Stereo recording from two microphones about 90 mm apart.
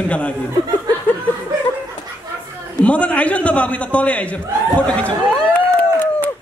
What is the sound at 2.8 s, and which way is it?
A man's voice, 15° left (ahead or behind).